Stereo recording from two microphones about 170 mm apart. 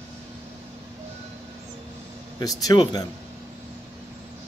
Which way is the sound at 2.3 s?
20° left (ahead or behind).